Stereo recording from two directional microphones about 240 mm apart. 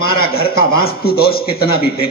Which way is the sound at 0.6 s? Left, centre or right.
Left.